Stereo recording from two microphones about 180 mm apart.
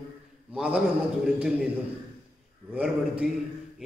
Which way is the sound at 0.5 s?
5° right (ahead or behind).